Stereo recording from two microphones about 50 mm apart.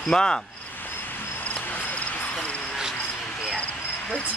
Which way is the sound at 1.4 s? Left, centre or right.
Left.